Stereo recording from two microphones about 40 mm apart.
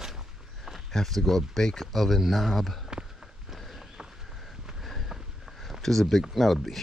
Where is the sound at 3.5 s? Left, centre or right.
Centre.